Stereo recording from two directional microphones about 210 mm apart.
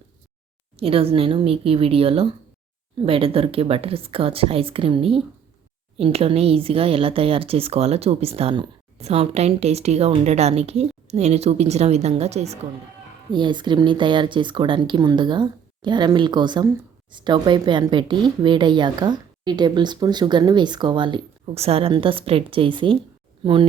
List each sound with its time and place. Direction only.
0.8 s speech: 25° right (ahead or behind)